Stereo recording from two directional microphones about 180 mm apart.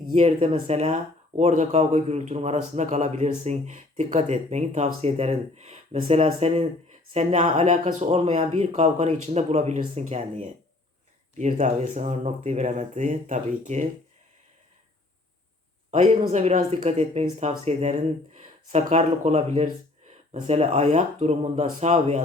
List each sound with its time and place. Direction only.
0.1 s a man's voice: 35° right (ahead or behind)
15.9 s a man's voice: 40° right (ahead or behind)